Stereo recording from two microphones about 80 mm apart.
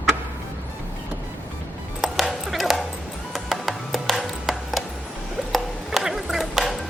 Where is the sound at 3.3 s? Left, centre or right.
Centre.